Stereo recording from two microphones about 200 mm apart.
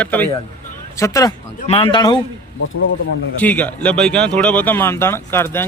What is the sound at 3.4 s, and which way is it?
Speech, 10° left (ahead or behind).